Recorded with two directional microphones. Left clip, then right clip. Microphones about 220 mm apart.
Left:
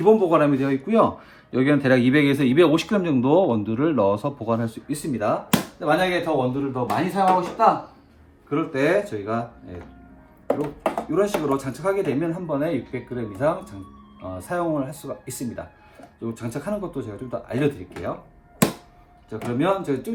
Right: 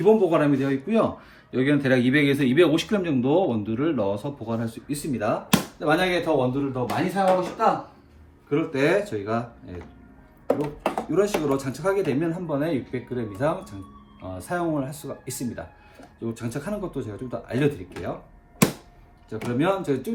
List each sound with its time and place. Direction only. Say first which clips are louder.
0.0 s a man's voice: left 2 dB; 15° left (ahead or behind)
8.4 s speech: left 1 dB; 10° left (ahead or behind)
19.3 s speech: left 1 dB; 10° left (ahead or behind)